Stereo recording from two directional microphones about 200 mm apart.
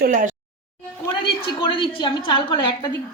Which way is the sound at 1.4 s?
25° left (ahead or behind).